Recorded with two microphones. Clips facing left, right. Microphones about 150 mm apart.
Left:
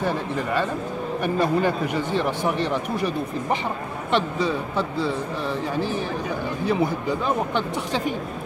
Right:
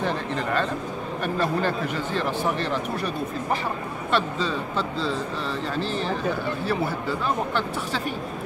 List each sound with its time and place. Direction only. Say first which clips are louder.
0.0 s speech: left 1 dB; 10° left (ahead or behind)
4.1 s speech: left 2 dB; 15° left (ahead or behind)